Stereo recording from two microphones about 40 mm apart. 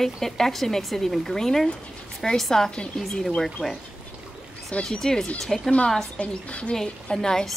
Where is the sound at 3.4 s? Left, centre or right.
Centre.